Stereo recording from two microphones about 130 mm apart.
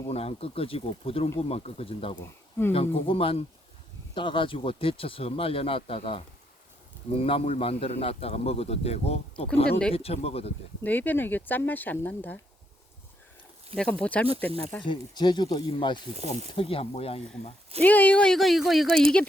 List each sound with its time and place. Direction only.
0.1 s a man's voice: 50° left (ahead or behind)
10.8 s speech: 15° left (ahead or behind)
13.7 s speech: 10° left (ahead or behind)
14.8 s speech: 35° left (ahead or behind)
16.1 s speech: 60° right (ahead or behind)
16.6 s a man's voice: 45° left (ahead or behind)
17.8 s speech: 10° left (ahead or behind)